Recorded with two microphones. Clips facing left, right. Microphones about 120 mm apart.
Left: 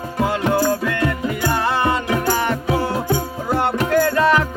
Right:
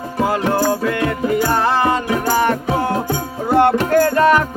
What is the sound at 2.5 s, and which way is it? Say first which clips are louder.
Music: right 2 dB; 50° right (ahead or behind).